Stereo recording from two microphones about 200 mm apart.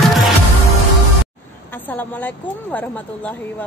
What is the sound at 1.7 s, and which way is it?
A woman's voice, 10° left (ahead or behind).